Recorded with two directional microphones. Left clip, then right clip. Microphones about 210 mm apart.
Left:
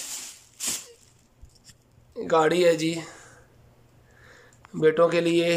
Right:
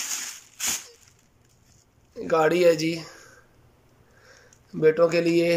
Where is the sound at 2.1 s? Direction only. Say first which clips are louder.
Even; centre (ahead or behind).